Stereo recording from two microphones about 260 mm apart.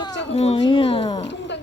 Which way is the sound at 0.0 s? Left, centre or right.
Centre.